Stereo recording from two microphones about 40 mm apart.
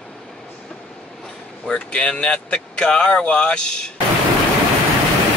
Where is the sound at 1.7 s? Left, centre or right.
Left.